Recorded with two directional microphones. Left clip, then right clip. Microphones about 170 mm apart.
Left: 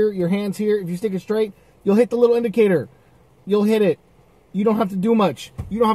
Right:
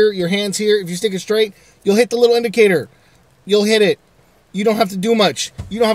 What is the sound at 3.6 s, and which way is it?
Speech, 15° right (ahead or behind).